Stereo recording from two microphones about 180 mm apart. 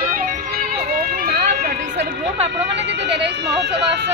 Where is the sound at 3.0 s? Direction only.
70° right (ahead or behind).